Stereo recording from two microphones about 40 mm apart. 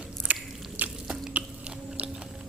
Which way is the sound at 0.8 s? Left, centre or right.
Right.